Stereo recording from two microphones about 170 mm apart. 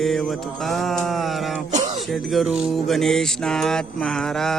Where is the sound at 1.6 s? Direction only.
45° right (ahead or behind).